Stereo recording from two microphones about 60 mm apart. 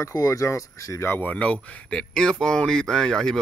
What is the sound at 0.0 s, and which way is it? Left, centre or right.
Speech, left.